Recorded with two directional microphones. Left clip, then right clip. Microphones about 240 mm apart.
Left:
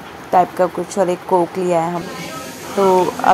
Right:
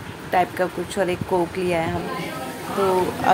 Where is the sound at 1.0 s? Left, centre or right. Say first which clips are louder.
Left 7 dB; centre.